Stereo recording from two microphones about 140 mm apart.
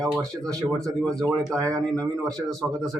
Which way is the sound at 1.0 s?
5° left (ahead or behind).